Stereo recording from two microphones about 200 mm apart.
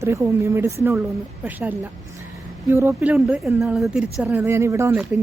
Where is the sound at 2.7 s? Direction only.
15° right (ahead or behind).